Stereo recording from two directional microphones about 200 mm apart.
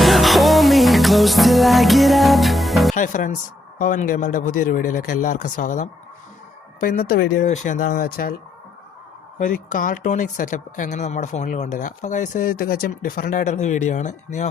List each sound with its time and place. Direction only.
0.0 s music: centre (ahead or behind)
2.9 s speech: 40° left (ahead or behind)
9.4 s speech: 45° left (ahead or behind)